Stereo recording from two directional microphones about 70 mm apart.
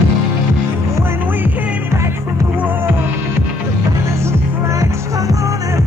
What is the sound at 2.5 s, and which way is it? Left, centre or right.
Music, right.